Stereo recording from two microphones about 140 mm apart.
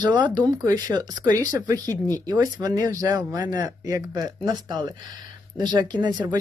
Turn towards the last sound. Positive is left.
turn(degrees=-30)  # may be behind; listen again after turning